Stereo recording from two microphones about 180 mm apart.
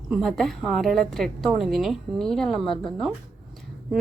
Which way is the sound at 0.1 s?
Centre (ahead or behind).